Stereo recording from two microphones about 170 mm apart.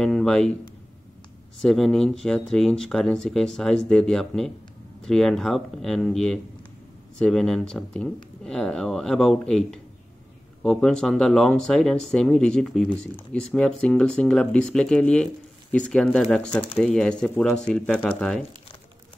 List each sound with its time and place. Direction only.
0.0 s speech: 5° left (ahead or behind)
1.6 s speech: centre (ahead or behind)